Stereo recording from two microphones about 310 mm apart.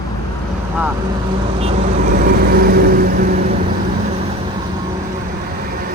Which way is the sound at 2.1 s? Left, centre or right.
Right.